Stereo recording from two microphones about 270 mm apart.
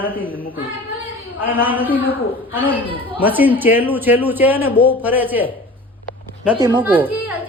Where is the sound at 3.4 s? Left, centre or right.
Centre.